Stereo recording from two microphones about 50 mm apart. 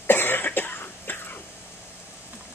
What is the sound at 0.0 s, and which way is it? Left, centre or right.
Cough, left.